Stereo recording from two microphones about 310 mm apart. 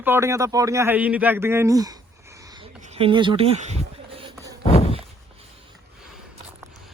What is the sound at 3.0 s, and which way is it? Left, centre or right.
Speech, centre.